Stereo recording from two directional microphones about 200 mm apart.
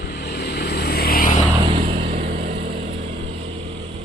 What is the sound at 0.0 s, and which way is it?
Vehicle, 55° left (ahead or behind).